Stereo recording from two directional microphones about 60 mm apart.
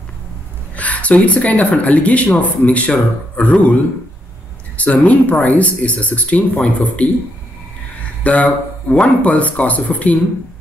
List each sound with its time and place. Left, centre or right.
0.7 s speech: left
4.7 s speech: left
8.2 s speech: left